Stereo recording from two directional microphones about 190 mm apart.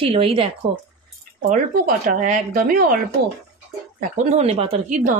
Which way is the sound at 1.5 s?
45° right (ahead or behind).